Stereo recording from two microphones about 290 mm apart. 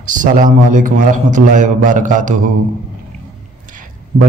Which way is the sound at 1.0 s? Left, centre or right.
Right.